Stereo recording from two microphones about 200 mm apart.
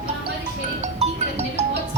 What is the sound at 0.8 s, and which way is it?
Music, 35° right (ahead or behind).